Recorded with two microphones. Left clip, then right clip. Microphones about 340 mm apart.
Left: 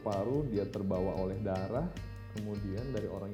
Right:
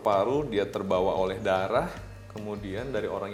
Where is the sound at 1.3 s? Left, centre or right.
Centre.